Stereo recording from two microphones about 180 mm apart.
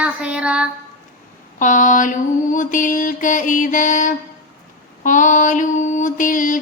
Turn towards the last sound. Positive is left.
turn(degrees=50)  # may be behind; listen again after turning